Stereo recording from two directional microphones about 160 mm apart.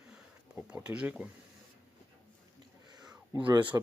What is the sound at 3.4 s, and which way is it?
Speech, 30° right (ahead or behind).